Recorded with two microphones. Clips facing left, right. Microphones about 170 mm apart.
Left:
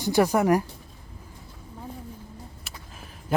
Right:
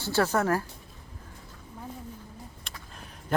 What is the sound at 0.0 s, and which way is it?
Speech, 15° left (ahead or behind).